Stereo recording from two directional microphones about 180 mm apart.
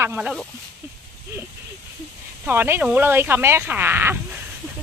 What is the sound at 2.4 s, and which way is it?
Speech, 10° right (ahead or behind).